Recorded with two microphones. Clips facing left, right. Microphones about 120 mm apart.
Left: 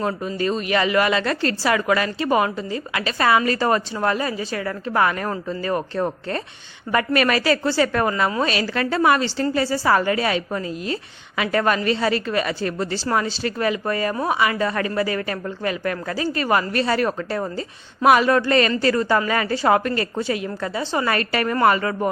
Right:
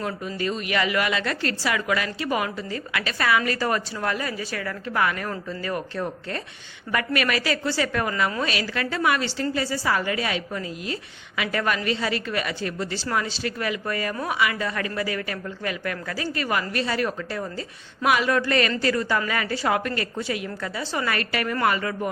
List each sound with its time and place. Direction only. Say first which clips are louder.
0.0 s a woman's voice: left 5 dB; 35° left (ahead or behind)
16.8 s a woman's voice: left 5 dB; 50° left (ahead or behind)